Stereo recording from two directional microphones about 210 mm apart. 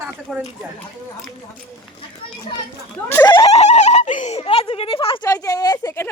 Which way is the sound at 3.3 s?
30° left (ahead or behind).